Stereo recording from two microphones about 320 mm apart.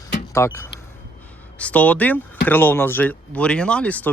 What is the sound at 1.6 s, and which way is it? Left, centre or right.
Speech, centre.